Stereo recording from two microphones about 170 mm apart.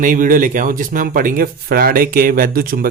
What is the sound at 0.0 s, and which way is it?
Speech, 55° right (ahead or behind).